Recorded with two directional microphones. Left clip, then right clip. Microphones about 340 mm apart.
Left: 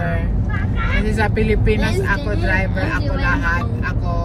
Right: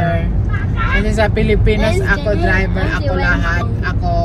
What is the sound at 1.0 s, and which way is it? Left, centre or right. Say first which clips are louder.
Speech: right 2 dB; centre.